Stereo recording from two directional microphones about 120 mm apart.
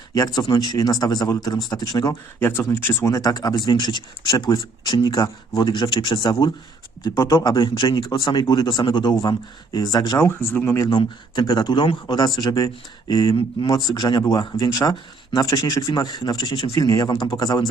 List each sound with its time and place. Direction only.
0.1 s speech: 30° left (ahead or behind)
2.4 s speech: 20° left (ahead or behind)
7.0 s speech: 25° left (ahead or behind)
7.5 s speech: 40° left (ahead or behind)
10.2 s speech: 20° left (ahead or behind)
10.8 s speech: 35° left (ahead or behind)
16.7 s speech: 30° left (ahead or behind)